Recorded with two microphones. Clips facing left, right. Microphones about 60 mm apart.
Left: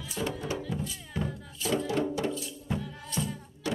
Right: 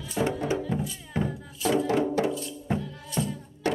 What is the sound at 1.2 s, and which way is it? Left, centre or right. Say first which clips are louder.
Music: right 5 dB; right.